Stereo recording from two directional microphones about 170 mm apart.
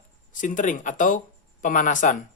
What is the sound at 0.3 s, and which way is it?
Speech, 50° left (ahead or behind).